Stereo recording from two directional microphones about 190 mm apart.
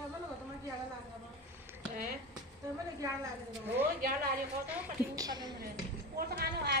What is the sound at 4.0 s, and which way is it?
Speech, 50° right (ahead or behind).